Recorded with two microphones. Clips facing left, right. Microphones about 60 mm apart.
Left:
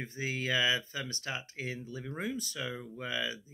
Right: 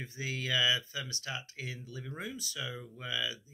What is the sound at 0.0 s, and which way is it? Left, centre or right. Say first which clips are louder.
Speech: left 3 dB; left.